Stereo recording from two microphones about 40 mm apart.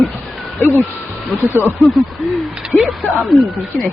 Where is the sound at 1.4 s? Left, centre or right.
Right.